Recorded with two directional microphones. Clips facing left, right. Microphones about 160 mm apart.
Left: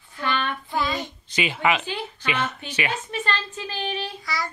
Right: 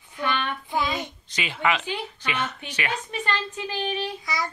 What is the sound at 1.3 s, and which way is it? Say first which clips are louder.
A woman's voice: left 3 dB; 10° left (ahead or behind).